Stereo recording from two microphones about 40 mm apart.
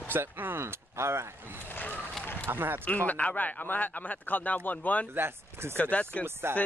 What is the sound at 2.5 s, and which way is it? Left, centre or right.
Speech, right.